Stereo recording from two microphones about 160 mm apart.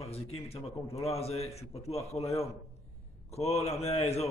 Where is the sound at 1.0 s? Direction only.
40° left (ahead or behind).